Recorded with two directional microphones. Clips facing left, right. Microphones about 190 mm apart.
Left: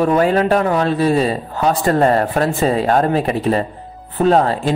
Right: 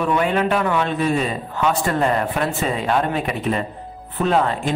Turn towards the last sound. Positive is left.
turn(degrees=35)  # may be behind; listen again after turning